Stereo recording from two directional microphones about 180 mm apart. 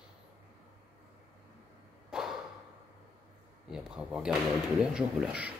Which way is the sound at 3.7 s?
5° right (ahead or behind).